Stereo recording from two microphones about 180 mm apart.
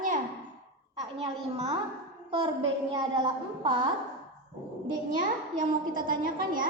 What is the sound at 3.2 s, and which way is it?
Speech, 25° right (ahead or behind).